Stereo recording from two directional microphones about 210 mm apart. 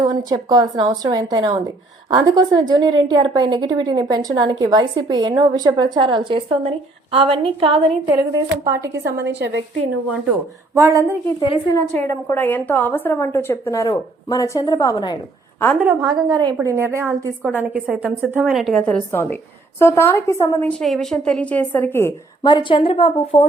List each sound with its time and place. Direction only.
0.0 s a woman's voice: 20° right (ahead or behind)
8.0 s a woman's voice: 10° right (ahead or behind)
9.0 s a woman's voice: 55° right (ahead or behind)
10.8 s a woman's voice: 15° right (ahead or behind)
11.3 s a woman's voice: 25° left (ahead or behind)
11.8 s a woman's voice: 10° left (ahead or behind)
15.8 s a woman's voice: 5° right (ahead or behind)
16.3 s a woman's voice: 20° right (ahead or behind); by 23.5 s 30° left (ahead or behind)